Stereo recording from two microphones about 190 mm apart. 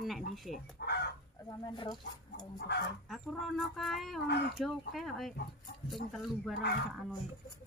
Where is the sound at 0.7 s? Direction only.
60° left (ahead or behind).